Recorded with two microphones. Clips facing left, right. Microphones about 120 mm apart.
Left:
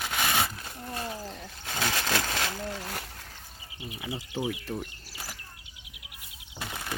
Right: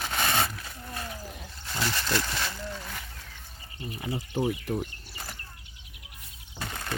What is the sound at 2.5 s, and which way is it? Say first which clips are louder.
Speech: left 3 dB; 50° left (ahead or behind).